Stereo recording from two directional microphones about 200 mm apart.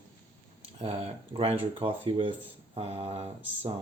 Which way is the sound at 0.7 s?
30° right (ahead or behind).